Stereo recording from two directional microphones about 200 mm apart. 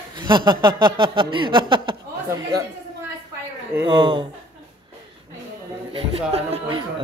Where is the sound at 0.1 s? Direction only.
25° right (ahead or behind).